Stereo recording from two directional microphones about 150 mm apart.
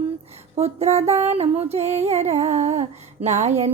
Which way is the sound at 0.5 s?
45° right (ahead or behind).